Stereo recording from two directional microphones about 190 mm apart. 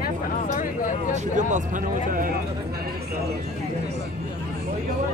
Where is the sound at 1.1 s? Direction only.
40° right (ahead or behind).